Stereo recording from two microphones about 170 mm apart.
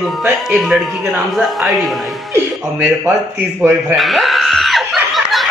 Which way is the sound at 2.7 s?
15° right (ahead or behind).